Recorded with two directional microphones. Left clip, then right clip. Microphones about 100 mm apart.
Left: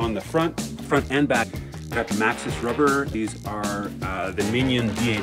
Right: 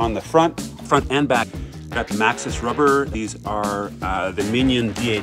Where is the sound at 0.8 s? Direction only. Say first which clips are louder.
Right 4 dB; 25° right (ahead or behind).